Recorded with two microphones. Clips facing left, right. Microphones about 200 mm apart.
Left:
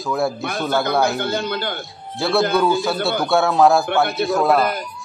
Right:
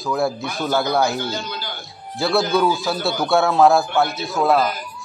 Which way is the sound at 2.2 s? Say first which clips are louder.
Left 1 dB; centre (ahead or behind).